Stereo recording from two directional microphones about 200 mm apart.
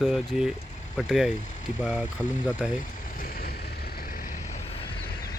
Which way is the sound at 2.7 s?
45° left (ahead or behind).